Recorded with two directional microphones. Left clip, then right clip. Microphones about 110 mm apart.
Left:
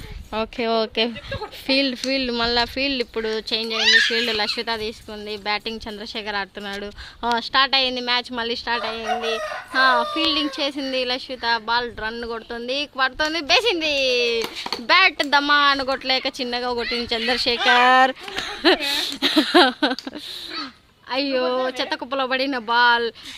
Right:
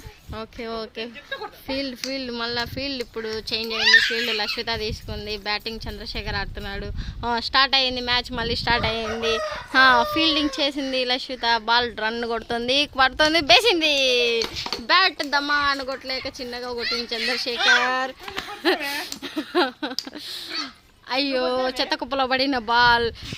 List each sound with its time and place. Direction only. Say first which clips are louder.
0.3 s speech: left 10 dB; 60° left (ahead or behind)
1.6 s speech: left 10 dB; 40° left (ahead or behind)
3.5 s speech: even; 5° left (ahead or behind)
3.8 s speech: even; 35° left (ahead or behind); by 4.6 s 15° left (ahead or behind)
4.6 s speech: left 1 dB; centre (ahead or behind)
5.5 s speech: left 4 dB; 10° left (ahead or behind)
7.3 s speech: left 1 dB; centre (ahead or behind)
8.8 s speech: even; 30° right (ahead or behind)
13.7 s speech: right 1 dB; 15° right (ahead or behind)
14.5 s speech: left 2 dB; 15° left (ahead or behind); by 17.7 s 40° left (ahead or behind)
18.6 s speech: left 5 dB; 55° left (ahead or behind)
19.5 s speech: left 5 dB; 80° left
21.1 s speech: left 1 dB; 5° left (ahead or behind)
21.5 s speech: even; 15° right (ahead or behind)